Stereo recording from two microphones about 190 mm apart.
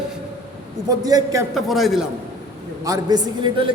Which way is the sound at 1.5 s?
Centre (ahead or behind).